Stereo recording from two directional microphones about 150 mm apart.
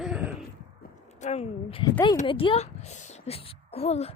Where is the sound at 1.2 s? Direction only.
45° left (ahead or behind).